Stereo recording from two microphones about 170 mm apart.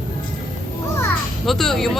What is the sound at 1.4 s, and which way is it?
Speech, centre (ahead or behind).